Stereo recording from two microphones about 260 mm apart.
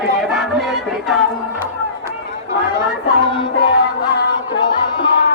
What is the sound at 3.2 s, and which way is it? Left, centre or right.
Music, centre.